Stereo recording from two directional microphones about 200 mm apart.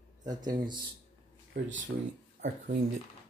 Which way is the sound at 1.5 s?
70° right (ahead or behind).